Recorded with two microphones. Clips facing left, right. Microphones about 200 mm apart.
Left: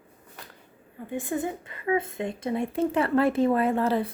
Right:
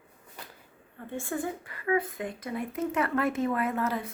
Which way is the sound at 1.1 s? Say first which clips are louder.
Left 3 dB; 15° left (ahead or behind).